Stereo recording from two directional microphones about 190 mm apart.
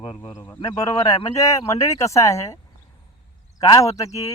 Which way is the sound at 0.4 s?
10° left (ahead or behind).